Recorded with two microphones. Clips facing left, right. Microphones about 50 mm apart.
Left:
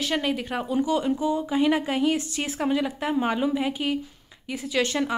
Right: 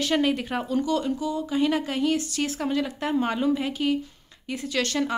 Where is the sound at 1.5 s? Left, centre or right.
Centre.